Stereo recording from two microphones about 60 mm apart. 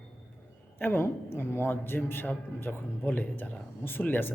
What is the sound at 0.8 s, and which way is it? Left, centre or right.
A man's voice, left.